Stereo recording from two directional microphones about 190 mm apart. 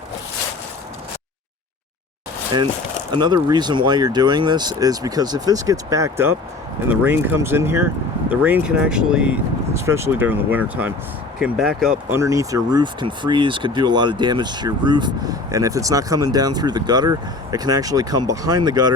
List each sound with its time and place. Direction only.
3.1 s speech: 25° right (ahead or behind); by 12.2 s 5° right (ahead or behind)
12.2 s speech: 15° right (ahead or behind)